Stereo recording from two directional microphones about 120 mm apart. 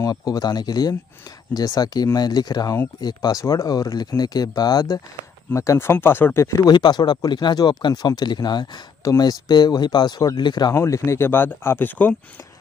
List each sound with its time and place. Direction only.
0.0 s speech: 30° left (ahead or behind)
10.7 s speech: 25° left (ahead or behind)